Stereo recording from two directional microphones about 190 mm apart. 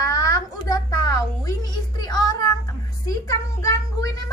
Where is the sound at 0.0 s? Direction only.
15° left (ahead or behind).